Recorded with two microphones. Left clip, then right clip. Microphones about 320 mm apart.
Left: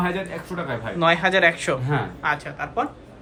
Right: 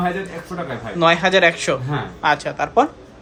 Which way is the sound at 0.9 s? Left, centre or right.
Centre.